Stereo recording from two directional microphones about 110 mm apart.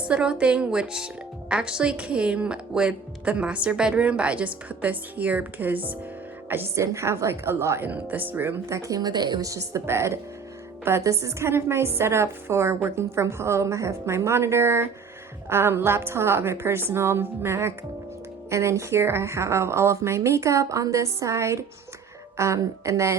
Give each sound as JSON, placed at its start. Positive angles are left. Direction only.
{"t": 0.1, "sound": "a woman's voice", "side_deg": -10}
{"t": 8.8, "sound": "a woman's voice", "side_deg": -35}